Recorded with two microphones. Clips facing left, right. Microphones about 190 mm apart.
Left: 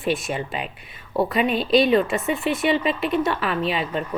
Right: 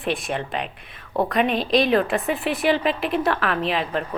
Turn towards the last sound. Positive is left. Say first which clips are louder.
# even
turn(degrees=0)  # may be behind; listen again after turning